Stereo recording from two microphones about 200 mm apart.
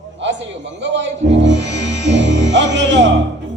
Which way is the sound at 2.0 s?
60° right (ahead or behind).